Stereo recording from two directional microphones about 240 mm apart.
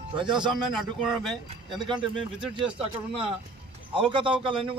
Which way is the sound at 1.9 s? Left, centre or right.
Centre.